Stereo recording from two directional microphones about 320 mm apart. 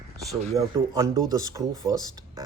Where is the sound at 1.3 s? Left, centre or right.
Centre.